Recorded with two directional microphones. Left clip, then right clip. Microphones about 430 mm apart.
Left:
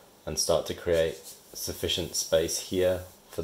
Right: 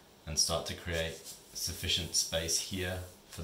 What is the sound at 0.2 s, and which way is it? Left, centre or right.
Speech, centre.